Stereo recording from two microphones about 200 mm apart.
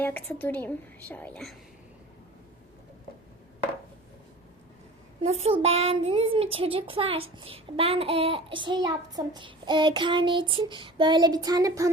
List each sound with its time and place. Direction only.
0.0 s a woman's voice: 10° left (ahead or behind)
5.4 s a child's voice: 30° right (ahead or behind)